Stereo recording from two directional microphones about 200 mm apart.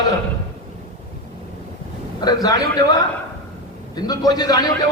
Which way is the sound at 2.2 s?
20° left (ahead or behind).